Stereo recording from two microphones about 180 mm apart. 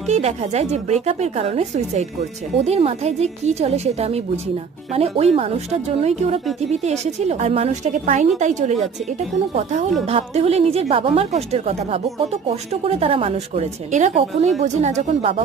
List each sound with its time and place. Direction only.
0.1 s a woman's voice: 35° right (ahead or behind)